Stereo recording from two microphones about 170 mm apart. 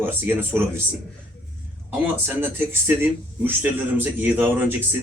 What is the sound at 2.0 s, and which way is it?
A man's voice, 10° right (ahead or behind).